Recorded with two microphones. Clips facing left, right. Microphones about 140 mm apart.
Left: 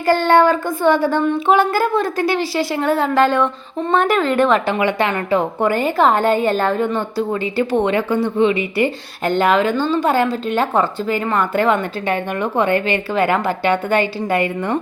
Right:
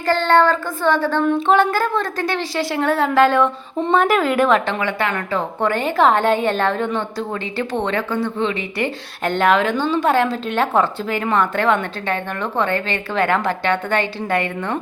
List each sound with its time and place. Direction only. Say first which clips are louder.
0.0 s speech: left 2 dB; 10° left (ahead or behind)
1.2 s a woman's voice: even; centre (ahead or behind)
4.8 s a woman's voice: left 4 dB; 20° left (ahead or behind)